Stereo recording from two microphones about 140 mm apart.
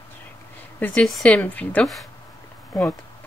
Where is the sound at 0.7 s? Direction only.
10° left (ahead or behind).